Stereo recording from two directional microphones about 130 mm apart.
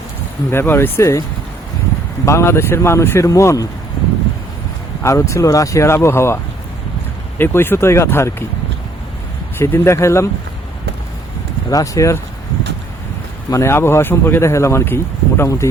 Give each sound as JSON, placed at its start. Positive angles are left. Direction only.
{"t": 0.5, "sound": "speech", "side_deg": 20}
{"t": 2.2, "sound": "speech", "side_deg": 20}
{"t": 5.0, "sound": "speech", "side_deg": 20}
{"t": 9.6, "sound": "speech", "side_deg": 20}
{"t": 11.7, "sound": "speech", "side_deg": 25}
{"t": 13.5, "sound": "speech", "side_deg": 20}